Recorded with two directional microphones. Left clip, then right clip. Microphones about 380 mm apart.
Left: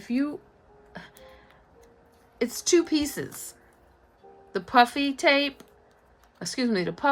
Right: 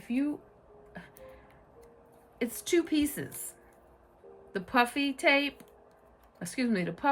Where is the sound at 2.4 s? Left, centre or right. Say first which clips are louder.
Left 6 dB; centre.